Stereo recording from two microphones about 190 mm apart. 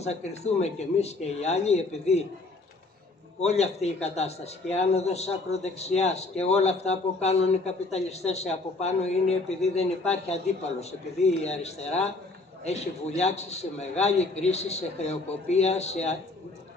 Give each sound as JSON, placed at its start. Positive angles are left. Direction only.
{"t": 0.0, "sound": "a man's voice", "side_deg": 35}
{"t": 3.3, "sound": "a man's voice", "side_deg": 35}